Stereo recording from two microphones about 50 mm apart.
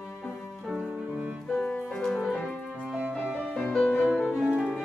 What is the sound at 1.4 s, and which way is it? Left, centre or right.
Music, left.